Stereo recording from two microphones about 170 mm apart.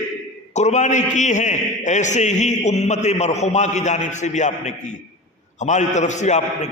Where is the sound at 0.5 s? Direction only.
45° left (ahead or behind).